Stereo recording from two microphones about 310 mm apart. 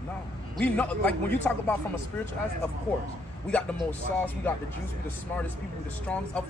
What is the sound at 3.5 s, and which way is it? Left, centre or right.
Speech, centre.